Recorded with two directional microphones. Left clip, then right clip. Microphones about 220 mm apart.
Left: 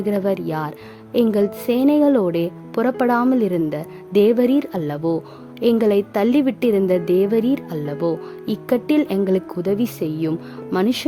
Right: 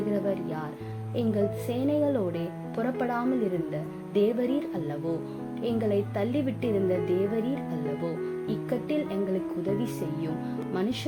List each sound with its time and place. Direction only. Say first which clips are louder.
0.1 s speech: left 13 dB; 55° left (ahead or behind)